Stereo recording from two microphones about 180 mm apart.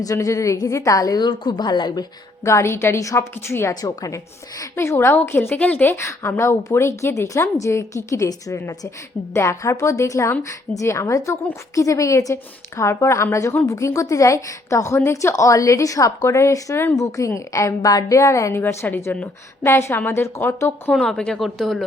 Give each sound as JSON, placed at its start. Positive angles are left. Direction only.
{"t": 0.0, "sound": "a woman's voice", "side_deg": 20}
{"t": 20.9, "sound": "speech", "side_deg": 0}